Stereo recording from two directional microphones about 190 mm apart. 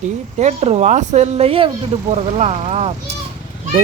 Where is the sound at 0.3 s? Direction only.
35° right (ahead or behind).